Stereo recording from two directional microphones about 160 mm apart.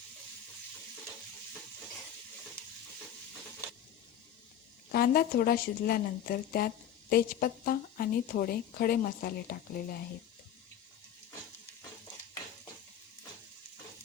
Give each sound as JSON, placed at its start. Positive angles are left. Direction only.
{"t": 4.9, "sound": "a woman's voice", "side_deg": 70}